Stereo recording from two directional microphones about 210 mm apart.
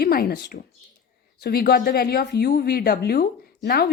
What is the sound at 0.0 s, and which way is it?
A woman's voice, 45° left (ahead or behind).